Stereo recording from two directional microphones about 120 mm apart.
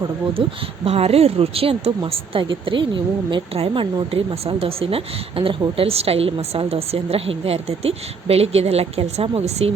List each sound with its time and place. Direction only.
0.4 s a woman's voice: 45° right (ahead or behind)
0.9 s a woman's voice: 55° right (ahead or behind)